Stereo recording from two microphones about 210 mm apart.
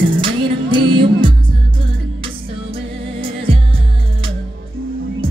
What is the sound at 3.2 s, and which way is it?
Music, 25° right (ahead or behind).